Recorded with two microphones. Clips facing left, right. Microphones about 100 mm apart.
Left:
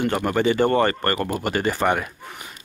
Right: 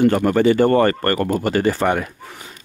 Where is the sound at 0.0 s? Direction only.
20° left (ahead or behind).